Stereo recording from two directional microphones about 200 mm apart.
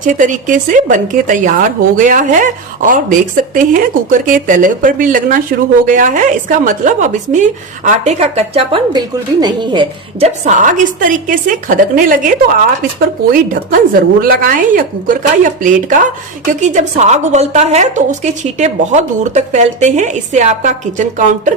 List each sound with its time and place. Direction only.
0.0 s speech: 40° right (ahead or behind)
13.3 s a woman's voice: 45° right (ahead or behind)